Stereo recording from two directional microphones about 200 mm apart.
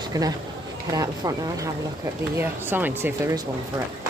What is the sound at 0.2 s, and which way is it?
Speech, 15° right (ahead or behind).